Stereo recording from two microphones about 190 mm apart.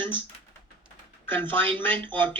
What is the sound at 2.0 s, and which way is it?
Speech, 10° left (ahead or behind).